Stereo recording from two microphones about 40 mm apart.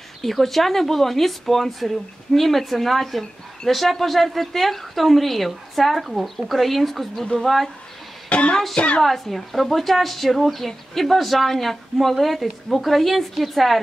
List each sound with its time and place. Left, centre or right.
0.2 s speech: centre
8.3 s a woman's voice: left
9.0 s speech: centre